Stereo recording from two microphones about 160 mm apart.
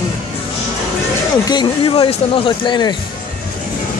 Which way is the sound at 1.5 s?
30° left (ahead or behind).